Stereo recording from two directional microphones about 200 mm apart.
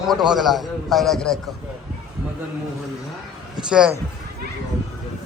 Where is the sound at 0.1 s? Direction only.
Centre (ahead or behind).